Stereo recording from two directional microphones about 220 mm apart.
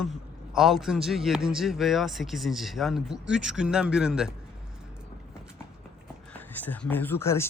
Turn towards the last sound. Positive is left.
turn(degrees=10)  # may be behind; listen again after turning